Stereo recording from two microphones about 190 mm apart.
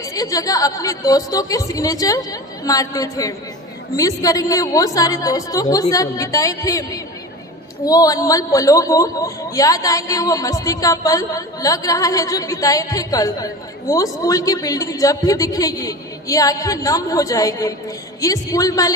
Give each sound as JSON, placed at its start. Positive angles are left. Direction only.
{"t": 0.0, "sound": "a woman's voice", "side_deg": 20}